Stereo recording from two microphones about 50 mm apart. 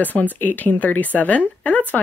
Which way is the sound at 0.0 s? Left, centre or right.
Left.